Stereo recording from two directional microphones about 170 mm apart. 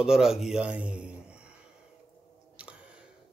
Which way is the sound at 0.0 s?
5° right (ahead or behind).